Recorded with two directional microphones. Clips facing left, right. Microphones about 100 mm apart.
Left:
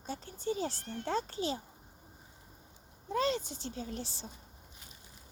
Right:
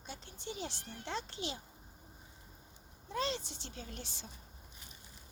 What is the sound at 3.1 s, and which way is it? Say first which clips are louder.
Speech: left 6 dB; 40° left (ahead or behind).